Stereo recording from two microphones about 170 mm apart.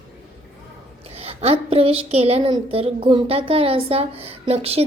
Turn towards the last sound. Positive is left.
turn(degrees=-35)  # may be behind; listen again after turning